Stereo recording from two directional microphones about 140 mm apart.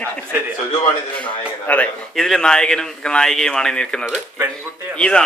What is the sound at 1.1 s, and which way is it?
Speech, 10° left (ahead or behind).